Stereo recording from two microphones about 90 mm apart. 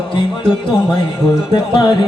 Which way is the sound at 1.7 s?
50° left (ahead or behind).